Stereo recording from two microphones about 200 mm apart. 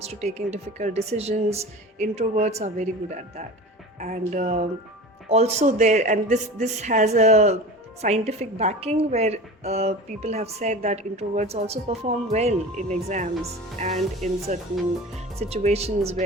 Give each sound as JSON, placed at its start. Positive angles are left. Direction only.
{"t": 0.0, "sound": "a woman's voice", "side_deg": -30}